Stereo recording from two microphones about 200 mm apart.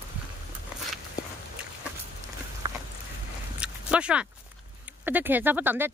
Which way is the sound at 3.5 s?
5° right (ahead or behind).